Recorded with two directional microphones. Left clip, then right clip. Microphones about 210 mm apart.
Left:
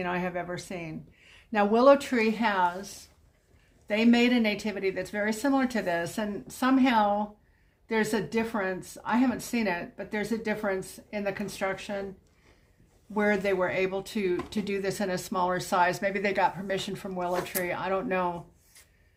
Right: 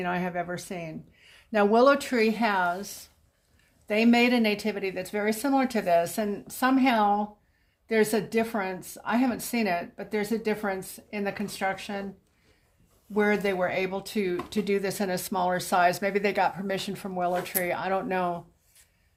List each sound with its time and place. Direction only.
0.0 s speech: 25° right (ahead or behind)
13.1 s speech: 20° right (ahead or behind)